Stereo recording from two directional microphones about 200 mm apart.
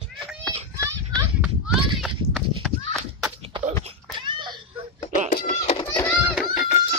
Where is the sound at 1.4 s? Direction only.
Centre (ahead or behind).